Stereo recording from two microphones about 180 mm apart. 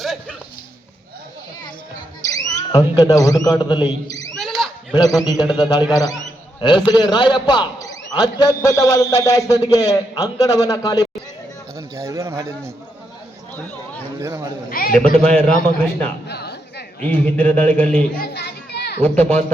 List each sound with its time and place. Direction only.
0.0 s a sound: centre (ahead or behind)
2.3 s a man's voice: 20° left (ahead or behind)
4.4 s a sound: centre (ahead or behind)
4.9 s a man's voice: 20° left (ahead or behind)
11.9 s speech: 15° right (ahead or behind)
14.2 s speech: 15° right (ahead or behind)
14.7 s a man's voice: 55° left (ahead or behind)
14.9 s a man's voice: 5° left (ahead or behind)
16.2 s a sound: 65° left (ahead or behind)
17.0 s speech: 10° left (ahead or behind)
18.2 s children playing: 65° left (ahead or behind)
19.0 s speech: 5° left (ahead or behind)